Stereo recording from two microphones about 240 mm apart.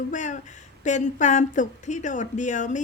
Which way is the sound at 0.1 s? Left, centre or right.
Left.